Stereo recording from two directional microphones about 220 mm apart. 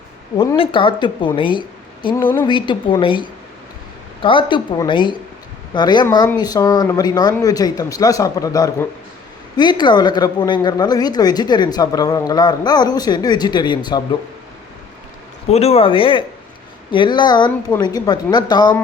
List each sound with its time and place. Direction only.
0.5 s speech: 25° left (ahead or behind)
15.4 s speech: 30° left (ahead or behind)